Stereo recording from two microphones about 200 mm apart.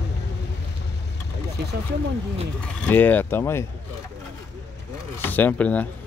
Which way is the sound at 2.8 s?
10° left (ahead or behind).